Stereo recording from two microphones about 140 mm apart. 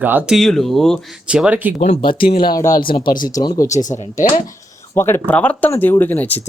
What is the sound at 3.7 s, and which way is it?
Speech, 60° left (ahead or behind).